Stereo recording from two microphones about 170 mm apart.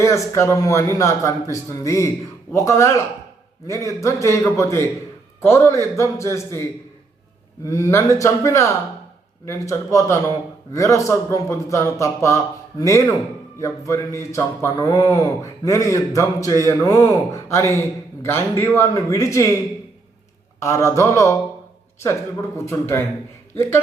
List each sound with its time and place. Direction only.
0.0 s a man's voice: 15° left (ahead or behind)
20.6 s a man's voice: 15° left (ahead or behind)
22.6 s a man's voice: 15° left (ahead or behind)